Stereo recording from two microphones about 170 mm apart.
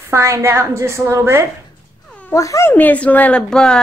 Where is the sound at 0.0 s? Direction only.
15° right (ahead or behind).